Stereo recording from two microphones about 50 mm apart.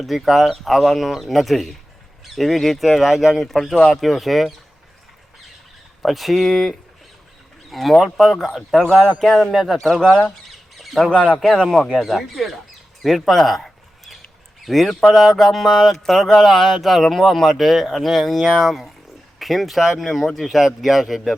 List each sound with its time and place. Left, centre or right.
0.0 s speech: centre
3.4 s speech: centre
6.0 s speech: centre
10.0 s speech: centre
10.8 s squawk: centre
11.3 s speech: centre
13.0 s a sound: centre
14.6 s speech: centre